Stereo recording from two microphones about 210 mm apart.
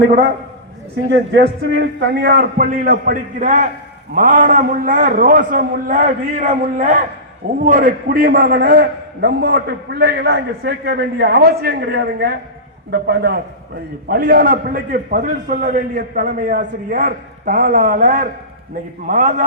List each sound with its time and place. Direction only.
1.1 s a man's voice: 55° right (ahead or behind); by 19.5 s 35° right (ahead or behind)